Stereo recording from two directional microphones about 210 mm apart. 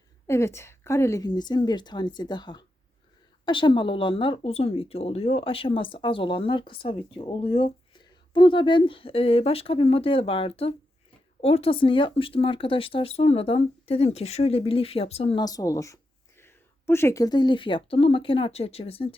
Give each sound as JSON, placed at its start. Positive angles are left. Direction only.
{"t": 0.3, "sound": "speech", "side_deg": 15}